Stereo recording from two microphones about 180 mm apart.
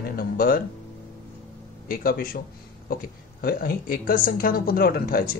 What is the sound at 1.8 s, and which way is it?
Speech, 50° left (ahead or behind).